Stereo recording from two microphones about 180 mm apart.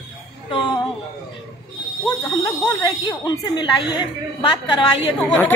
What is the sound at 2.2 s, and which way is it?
Speech, 20° left (ahead or behind).